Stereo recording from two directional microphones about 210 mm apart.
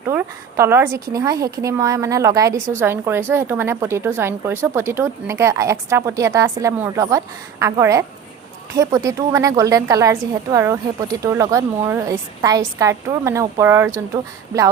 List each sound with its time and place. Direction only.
0.1 s a woman's voice: 15° right (ahead or behind)